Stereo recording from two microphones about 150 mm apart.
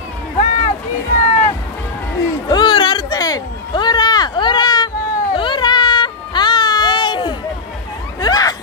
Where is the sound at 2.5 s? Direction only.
30° left (ahead or behind).